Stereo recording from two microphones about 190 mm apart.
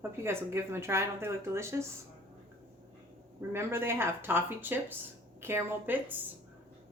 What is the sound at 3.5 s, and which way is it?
Speech, 15° right (ahead or behind).